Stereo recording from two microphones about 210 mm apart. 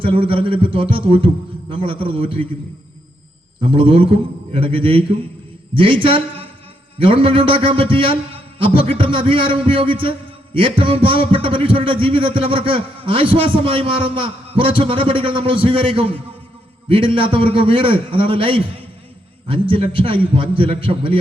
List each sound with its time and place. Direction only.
0.0 s a man's voice: 25° right (ahead or behind)
3.6 s a man's voice: 25° right (ahead or behind)